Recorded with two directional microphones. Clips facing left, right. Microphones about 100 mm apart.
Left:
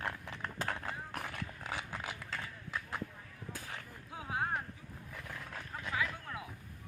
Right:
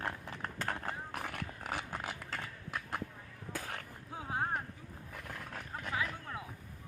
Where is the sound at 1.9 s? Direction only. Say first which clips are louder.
Right 1 dB; 45° right (ahead or behind).